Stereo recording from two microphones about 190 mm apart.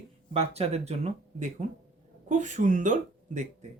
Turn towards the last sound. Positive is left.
turn(degrees=-40)  # may be behind; listen again after turning